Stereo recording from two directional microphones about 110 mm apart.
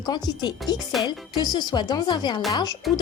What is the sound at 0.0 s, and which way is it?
Speech, 40° left (ahead or behind).